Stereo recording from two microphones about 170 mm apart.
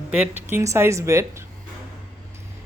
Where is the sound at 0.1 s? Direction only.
10° right (ahead or behind).